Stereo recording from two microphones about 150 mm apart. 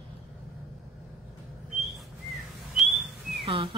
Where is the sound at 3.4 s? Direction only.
40° right (ahead or behind).